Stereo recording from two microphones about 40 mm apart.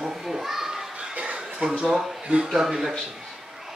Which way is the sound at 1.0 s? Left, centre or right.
Right.